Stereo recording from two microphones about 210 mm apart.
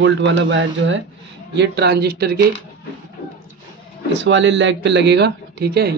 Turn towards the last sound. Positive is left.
turn(degrees=-50)  # may be behind; listen again after turning